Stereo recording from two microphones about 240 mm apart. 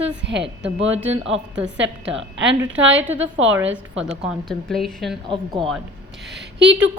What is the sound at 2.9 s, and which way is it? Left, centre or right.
A woman's voice, centre.